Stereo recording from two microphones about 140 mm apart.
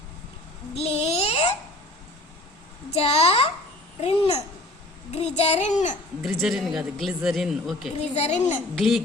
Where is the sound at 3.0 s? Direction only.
45° left (ahead or behind).